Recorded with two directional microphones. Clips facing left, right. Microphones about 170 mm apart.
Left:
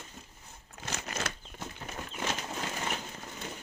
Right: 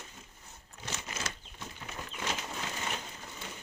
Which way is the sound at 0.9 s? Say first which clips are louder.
Left 4 dB; 60° left (ahead or behind).